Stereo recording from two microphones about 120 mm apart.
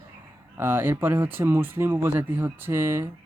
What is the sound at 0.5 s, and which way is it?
Speech, 15° right (ahead or behind).